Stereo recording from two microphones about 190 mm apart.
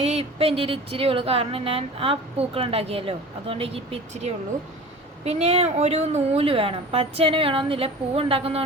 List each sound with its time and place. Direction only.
0.0 s speech: 35° right (ahead or behind)